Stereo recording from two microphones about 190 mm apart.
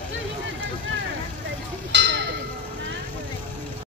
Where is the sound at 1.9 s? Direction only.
65° right (ahead or behind).